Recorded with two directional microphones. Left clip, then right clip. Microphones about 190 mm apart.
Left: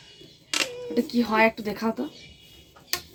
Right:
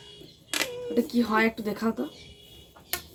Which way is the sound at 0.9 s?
15° left (ahead or behind).